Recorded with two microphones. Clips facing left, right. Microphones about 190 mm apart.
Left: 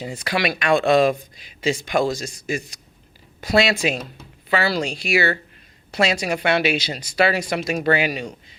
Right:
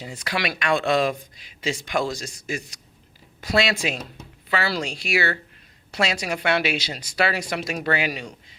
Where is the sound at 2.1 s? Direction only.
5° left (ahead or behind).